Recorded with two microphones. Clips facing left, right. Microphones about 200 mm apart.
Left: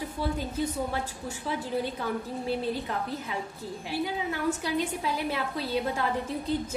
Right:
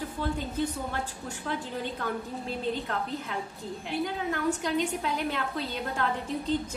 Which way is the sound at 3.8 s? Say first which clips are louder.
Even; 5° left (ahead or behind).